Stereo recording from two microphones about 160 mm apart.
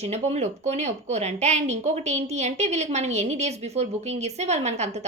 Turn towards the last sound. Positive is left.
turn(degrees=-45)  # may be behind; listen again after turning